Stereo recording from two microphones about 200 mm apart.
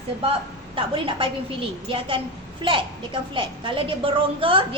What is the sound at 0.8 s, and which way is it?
A woman's voice, 25° right (ahead or behind).